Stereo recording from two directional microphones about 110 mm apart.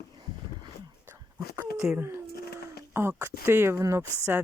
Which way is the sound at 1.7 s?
Centre (ahead or behind).